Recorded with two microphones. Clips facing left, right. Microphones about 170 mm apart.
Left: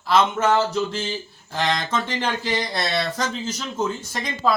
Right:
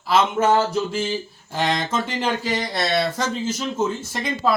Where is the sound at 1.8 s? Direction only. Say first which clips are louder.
Right 1 dB; 5° right (ahead or behind).